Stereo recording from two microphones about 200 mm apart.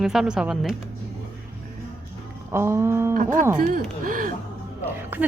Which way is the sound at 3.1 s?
40° right (ahead or behind).